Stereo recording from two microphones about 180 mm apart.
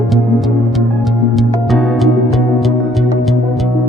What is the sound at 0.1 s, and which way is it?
Music, centre (ahead or behind).